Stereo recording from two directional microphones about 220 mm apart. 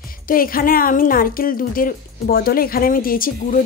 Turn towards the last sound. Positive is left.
turn(degrees=40)  # may be behind; listen again after turning